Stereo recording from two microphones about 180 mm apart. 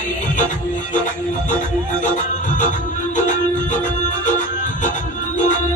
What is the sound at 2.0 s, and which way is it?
Music, 45° left (ahead or behind).